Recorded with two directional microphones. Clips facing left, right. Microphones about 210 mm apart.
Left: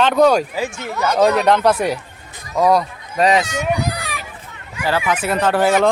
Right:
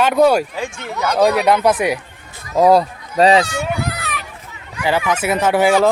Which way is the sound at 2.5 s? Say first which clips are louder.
Right 3 dB; 30° right (ahead or behind).